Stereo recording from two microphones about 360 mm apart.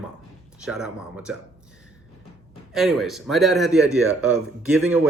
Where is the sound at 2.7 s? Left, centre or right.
Centre.